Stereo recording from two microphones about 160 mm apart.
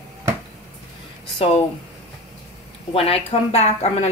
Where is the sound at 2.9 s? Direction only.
35° left (ahead or behind).